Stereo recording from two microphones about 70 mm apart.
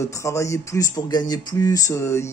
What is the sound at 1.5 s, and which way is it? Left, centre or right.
Speech, left.